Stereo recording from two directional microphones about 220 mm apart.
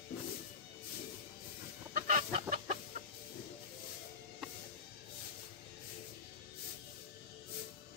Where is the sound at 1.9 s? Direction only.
35° right (ahead or behind).